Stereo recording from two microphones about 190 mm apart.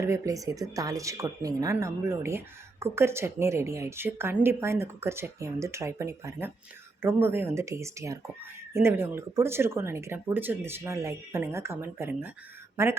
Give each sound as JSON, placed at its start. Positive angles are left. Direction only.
{"t": 0.0, "sound": "a woman's voice", "side_deg": -15}